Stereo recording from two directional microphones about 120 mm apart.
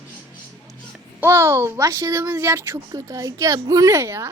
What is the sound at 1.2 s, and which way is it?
Speech, 20° right (ahead or behind).